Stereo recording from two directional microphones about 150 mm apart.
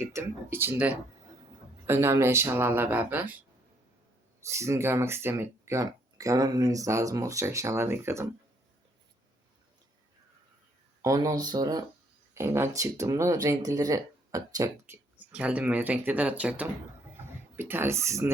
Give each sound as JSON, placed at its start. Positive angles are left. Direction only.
{"t": 0.1, "sound": "speech", "side_deg": -15}
{"t": 4.4, "sound": "speech", "side_deg": -20}
{"t": 11.0, "sound": "speech", "side_deg": -25}
{"t": 15.3, "sound": "speech", "side_deg": -10}